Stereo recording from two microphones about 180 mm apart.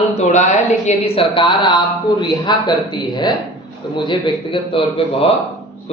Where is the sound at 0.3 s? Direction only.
40° left (ahead or behind); by 3.3 s 25° left (ahead or behind).